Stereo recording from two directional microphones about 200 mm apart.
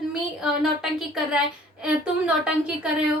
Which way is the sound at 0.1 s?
5° right (ahead or behind).